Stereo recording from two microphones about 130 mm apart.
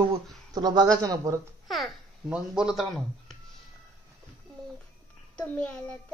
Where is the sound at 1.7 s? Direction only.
Centre (ahead or behind).